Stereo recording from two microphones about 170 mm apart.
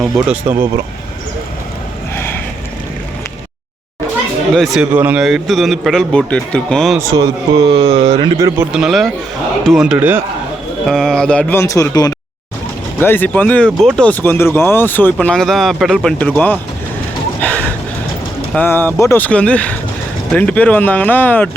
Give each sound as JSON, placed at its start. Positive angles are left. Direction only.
{"t": 0.0, "sound": "a man's voice", "side_deg": 0}
{"t": 2.1, "sound": "a sound", "side_deg": 15}
{"t": 4.5, "sound": "a man's voice", "side_deg": 0}
{"t": 7.0, "sound": "speech", "side_deg": -20}
{"t": 7.7, "sound": "speech", "side_deg": -40}
{"t": 8.7, "sound": "a man's voice", "side_deg": 0}
{"t": 10.8, "sound": "speech", "side_deg": 0}
{"t": 17.4, "sound": "gasp", "side_deg": 10}
{"t": 18.5, "sound": "speech", "side_deg": 10}